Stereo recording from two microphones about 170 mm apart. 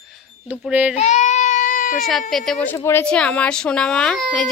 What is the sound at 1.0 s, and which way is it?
Baby cry, 45° left (ahead or behind).